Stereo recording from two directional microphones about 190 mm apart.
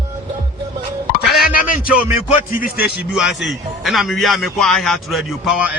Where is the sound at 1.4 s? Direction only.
50° left (ahead or behind).